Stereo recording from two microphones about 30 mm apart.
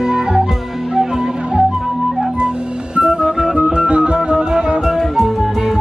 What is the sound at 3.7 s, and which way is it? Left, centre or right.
Music, right.